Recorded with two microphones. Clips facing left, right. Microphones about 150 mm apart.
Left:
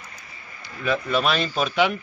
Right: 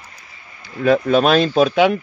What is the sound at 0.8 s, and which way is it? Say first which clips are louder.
Speech: right 9 dB; 50° right (ahead or behind).